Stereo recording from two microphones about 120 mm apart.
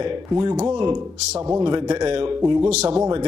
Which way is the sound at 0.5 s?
65° right (ahead or behind).